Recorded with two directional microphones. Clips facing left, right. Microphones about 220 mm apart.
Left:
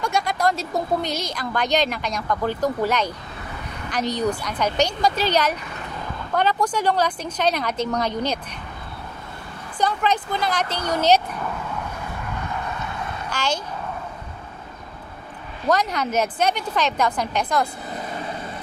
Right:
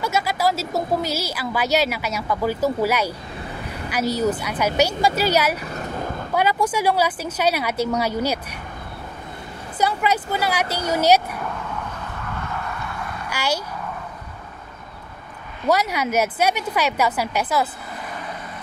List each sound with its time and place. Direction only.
0.0 s a woman's voice: 5° right (ahead or behind)
5.7 s vehicle: 45° right (ahead or behind)
6.3 s a woman's voice: 10° right (ahead or behind)
9.8 s a woman's voice: 10° right (ahead or behind)
13.3 s speech: 10° right (ahead or behind)
15.6 s a woman's voice: 10° right (ahead or behind)